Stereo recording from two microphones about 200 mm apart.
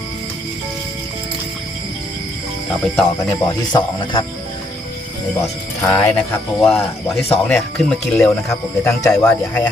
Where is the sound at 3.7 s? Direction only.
25° left (ahead or behind).